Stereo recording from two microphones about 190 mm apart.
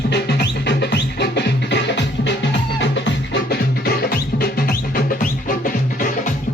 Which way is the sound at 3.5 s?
55° left (ahead or behind).